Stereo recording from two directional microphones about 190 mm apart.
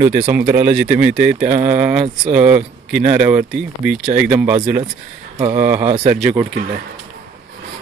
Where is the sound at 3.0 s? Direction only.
35° right (ahead or behind).